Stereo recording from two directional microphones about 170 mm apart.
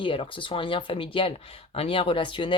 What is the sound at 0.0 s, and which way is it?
Speech, 30° left (ahead or behind).